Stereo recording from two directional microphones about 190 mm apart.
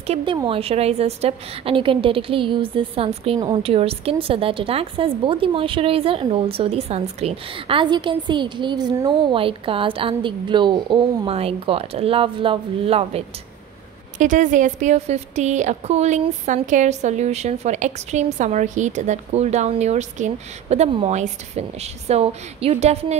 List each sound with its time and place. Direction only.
0.0 s speech: 30° right (ahead or behind)
3.3 s speech: 20° right (ahead or behind)
3.6 s speech: 30° right (ahead or behind)
14.1 s a woman's voice: 40° right (ahead or behind)